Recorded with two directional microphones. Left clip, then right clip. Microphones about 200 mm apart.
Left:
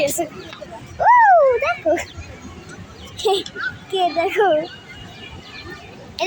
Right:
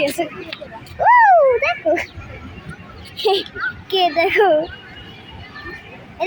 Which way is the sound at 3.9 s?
15° right (ahead or behind).